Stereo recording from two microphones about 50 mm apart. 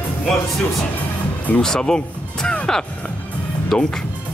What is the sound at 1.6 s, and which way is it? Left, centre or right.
Speech, centre.